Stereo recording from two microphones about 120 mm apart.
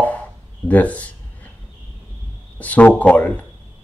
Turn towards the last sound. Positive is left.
turn(degrees=15)  # may be behind; listen again after turning